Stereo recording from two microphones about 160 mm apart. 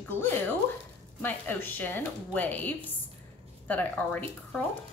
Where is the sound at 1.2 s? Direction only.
10° left (ahead or behind).